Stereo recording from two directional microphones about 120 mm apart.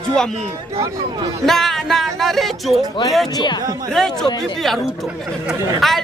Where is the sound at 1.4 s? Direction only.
Centre (ahead or behind).